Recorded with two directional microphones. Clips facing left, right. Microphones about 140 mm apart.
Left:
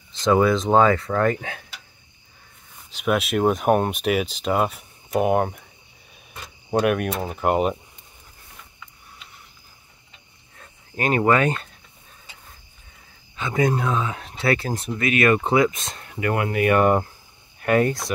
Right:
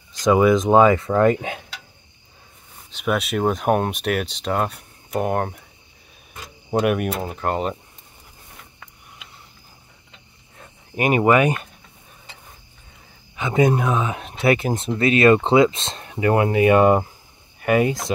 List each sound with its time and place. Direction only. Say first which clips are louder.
0.2 s speech: right 2 dB; 10° right (ahead or behind)
2.9 s speech: left 1 dB; centre (ahead or behind)
6.7 s speech: right 1 dB; 5° right (ahead or behind)
10.6 s a sound: right 3 dB; 15° right (ahead or behind)
13.4 s speech: right 3 dB; 20° right (ahead or behind)
17.6 s speech: right 1 dB; 5° right (ahead or behind)